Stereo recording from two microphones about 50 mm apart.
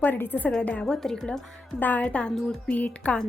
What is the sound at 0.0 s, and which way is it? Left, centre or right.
Speech, left.